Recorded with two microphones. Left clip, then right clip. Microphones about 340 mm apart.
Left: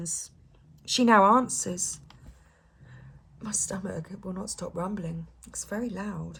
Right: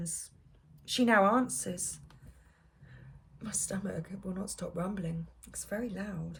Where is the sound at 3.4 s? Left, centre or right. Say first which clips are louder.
Left 5 dB; centre.